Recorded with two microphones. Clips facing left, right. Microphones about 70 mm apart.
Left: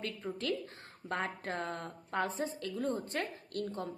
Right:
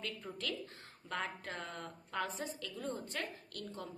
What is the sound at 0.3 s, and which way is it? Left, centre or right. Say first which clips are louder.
Speech: left 6 dB; left.